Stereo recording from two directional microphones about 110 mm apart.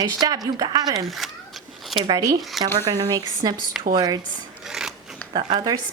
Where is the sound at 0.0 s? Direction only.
40° right (ahead or behind).